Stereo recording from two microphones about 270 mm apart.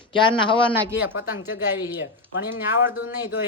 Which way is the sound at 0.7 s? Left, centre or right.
Centre.